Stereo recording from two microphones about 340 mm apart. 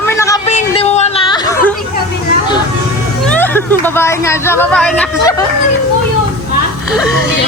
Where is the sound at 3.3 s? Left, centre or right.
Centre.